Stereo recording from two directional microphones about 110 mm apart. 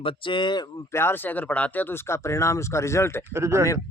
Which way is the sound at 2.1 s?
25° left (ahead or behind).